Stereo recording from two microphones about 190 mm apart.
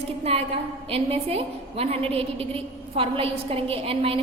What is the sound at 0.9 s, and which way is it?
A woman's voice, 30° right (ahead or behind).